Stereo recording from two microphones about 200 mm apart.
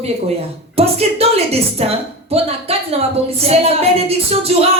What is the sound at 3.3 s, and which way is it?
Music, 30° right (ahead or behind).